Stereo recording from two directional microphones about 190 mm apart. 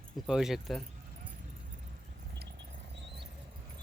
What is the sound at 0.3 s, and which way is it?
Speech, centre (ahead or behind).